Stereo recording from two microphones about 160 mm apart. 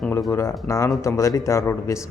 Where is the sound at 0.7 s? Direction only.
20° left (ahead or behind).